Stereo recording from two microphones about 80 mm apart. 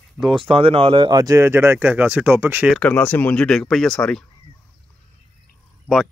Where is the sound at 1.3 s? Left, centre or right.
Right.